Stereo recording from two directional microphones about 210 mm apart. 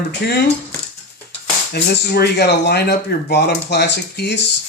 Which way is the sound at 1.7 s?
50° left (ahead or behind).